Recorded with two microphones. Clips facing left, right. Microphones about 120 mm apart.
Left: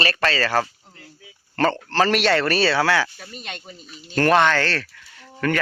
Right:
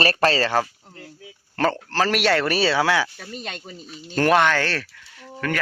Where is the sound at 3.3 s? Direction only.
40° right (ahead or behind).